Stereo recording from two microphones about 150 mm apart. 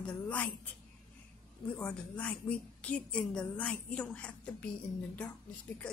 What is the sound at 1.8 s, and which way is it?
A woman's voice, 10° left (ahead or behind).